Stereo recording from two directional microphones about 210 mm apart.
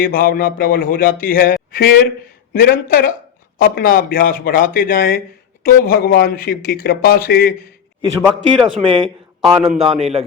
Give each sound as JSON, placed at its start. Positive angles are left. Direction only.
{"t": 0.0, "sound": "speech", "side_deg": 45}
{"t": 8.2, "sound": "speech", "side_deg": 0}
{"t": 8.8, "sound": "a man's voice", "side_deg": -25}
{"t": 9.0, "sound": "a man's voice", "side_deg": 0}
{"t": 9.6, "sound": "a man's voice", "side_deg": -30}